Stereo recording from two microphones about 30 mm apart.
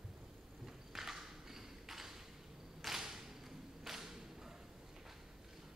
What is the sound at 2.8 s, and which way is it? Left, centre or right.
Whip, centre.